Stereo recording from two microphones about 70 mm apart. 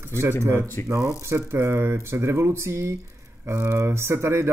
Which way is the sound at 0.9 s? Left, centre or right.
Right.